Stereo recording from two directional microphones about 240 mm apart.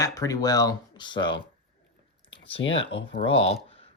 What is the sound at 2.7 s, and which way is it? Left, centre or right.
Speech, left.